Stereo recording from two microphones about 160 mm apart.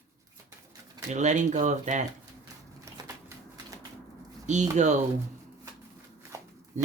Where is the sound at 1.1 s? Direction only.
50° right (ahead or behind).